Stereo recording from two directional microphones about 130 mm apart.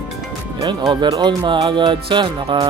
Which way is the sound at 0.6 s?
35° right (ahead or behind).